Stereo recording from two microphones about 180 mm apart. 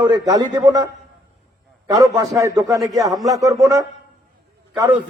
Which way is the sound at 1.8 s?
20° right (ahead or behind).